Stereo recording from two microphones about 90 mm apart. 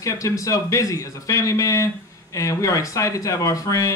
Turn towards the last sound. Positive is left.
turn(degrees=35)  # may be behind; listen again after turning